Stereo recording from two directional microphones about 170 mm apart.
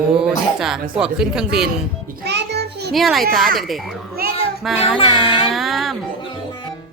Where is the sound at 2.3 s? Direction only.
80° right.